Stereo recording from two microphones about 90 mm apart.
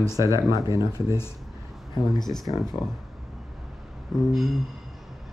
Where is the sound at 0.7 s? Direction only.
40° right (ahead or behind).